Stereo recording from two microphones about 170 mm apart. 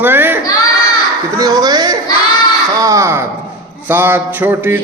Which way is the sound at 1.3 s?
20° right (ahead or behind).